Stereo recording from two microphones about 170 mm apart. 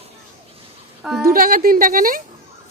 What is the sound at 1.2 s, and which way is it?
A woman's voice, 55° right (ahead or behind).